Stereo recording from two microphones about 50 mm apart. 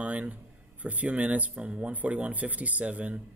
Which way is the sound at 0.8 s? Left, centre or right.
Right.